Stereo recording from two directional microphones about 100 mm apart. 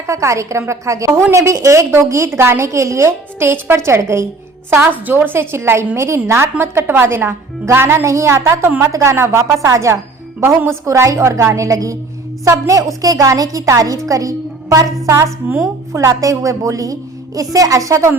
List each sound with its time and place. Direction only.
0.1 s a woman's voice: 30° right (ahead or behind)
10.8 s a woman's voice: 30° right (ahead or behind)